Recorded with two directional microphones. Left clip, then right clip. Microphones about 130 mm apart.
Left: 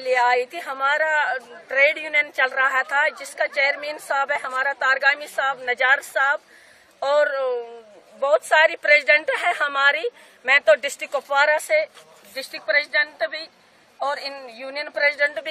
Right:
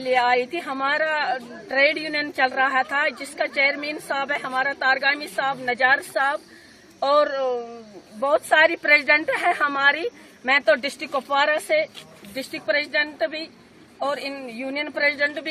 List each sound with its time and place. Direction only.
0.0 s a woman's voice: 15° left (ahead or behind)
8.2 s a woman's voice: 55° left (ahead or behind); by 11.7 s 15° left (ahead or behind)
12.4 s a woman's voice: 25° right (ahead or behind); by 14.4 s 40° right (ahead or behind)
14.4 s speech: 20° right (ahead or behind)
14.9 s speech: centre (ahead or behind)
15.1 s speech: 15° left (ahead or behind)